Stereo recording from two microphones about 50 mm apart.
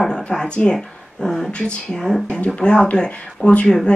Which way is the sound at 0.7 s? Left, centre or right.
Centre.